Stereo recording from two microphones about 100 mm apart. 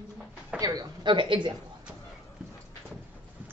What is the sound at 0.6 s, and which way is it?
Speech, 45° right (ahead or behind).